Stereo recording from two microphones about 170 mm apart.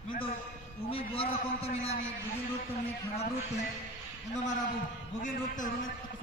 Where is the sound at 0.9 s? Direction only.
35° left (ahead or behind).